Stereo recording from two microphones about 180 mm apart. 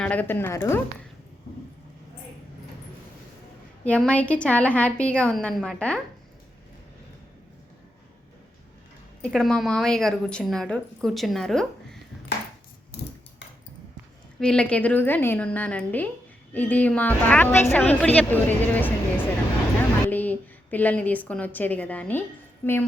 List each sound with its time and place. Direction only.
0.0 s a woman's voice: 10° left (ahead or behind)
3.8 s a woman's voice: 5° left (ahead or behind)
9.2 s a woman's voice: 5° left (ahead or behind)
14.3 s a woman's voice: 5° left (ahead or behind)